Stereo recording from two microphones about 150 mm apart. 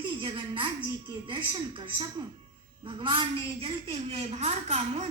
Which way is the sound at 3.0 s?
35° right (ahead or behind).